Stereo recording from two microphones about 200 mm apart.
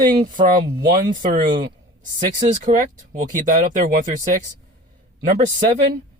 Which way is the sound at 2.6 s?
40° right (ahead or behind).